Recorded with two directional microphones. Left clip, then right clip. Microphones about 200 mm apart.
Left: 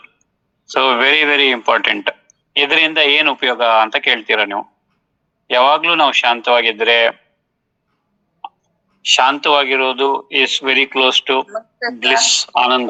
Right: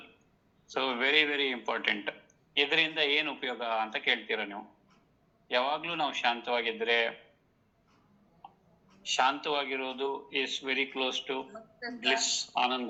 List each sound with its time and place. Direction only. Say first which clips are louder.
0.6 s a man's voice: left 17 dB; 65° left (ahead or behind)
9.0 s a man's voice: left 16 dB; 65° left (ahead or behind)